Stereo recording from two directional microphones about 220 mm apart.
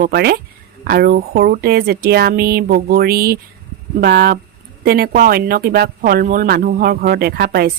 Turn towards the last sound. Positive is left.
turn(degrees=-45)  # may be behind; listen again after turning